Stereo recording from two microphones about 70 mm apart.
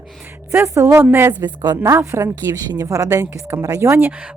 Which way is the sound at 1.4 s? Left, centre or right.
Right.